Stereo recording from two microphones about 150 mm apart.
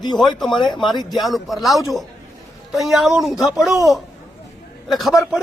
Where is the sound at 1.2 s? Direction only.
Centre (ahead or behind).